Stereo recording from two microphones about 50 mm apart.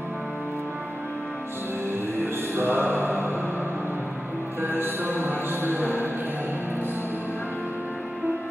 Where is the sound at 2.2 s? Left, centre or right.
Right.